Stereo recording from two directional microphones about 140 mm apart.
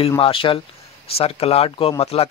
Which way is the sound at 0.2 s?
40° left (ahead or behind).